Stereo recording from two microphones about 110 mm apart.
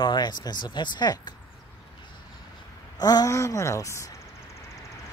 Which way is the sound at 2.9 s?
35° left (ahead or behind).